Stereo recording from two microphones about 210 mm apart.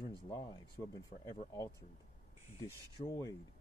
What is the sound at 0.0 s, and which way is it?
Speech, 20° left (ahead or behind).